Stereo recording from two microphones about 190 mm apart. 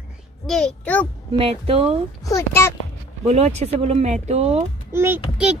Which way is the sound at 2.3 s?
15° left (ahead or behind).